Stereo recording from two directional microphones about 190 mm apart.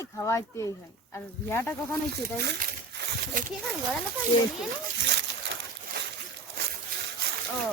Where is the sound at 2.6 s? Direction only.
50° right (ahead or behind).